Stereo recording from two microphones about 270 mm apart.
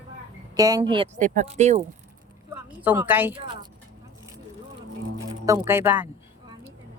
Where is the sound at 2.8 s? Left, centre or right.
Centre.